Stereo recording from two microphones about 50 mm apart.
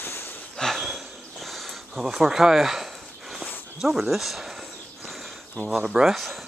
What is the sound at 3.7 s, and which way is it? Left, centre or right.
Speech, centre.